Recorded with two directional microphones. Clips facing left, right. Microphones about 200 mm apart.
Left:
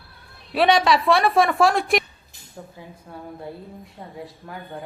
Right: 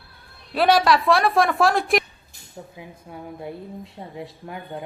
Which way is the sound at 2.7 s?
15° right (ahead or behind).